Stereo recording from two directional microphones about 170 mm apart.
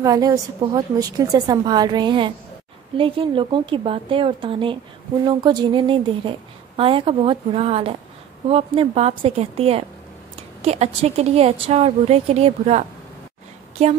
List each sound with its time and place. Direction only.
0.0 s a woman's voice: 20° right (ahead or behind); by 13.9 s 35° right (ahead or behind)